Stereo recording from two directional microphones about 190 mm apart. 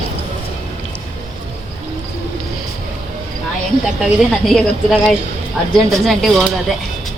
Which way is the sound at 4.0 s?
Centre (ahead or behind).